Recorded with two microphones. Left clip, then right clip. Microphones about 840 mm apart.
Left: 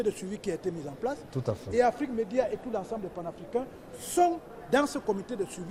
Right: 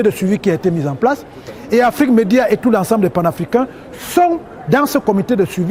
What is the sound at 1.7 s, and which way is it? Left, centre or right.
A man's voice, right.